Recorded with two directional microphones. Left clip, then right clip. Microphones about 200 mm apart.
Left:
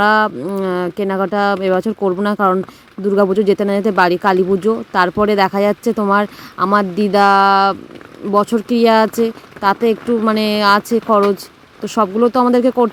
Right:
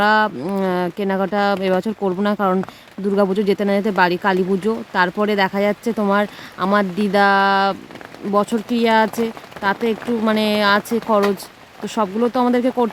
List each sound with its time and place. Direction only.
0.0 s speech: 10° left (ahead or behind)